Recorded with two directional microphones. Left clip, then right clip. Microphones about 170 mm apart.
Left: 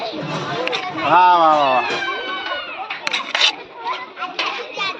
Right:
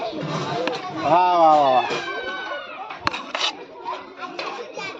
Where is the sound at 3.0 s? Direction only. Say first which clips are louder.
Left 7 dB; 35° right (ahead or behind).